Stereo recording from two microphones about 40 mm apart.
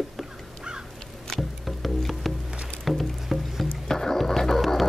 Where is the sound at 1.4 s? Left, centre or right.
Centre.